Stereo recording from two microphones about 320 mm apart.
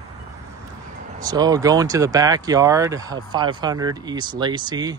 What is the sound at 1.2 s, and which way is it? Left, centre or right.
Speech, centre.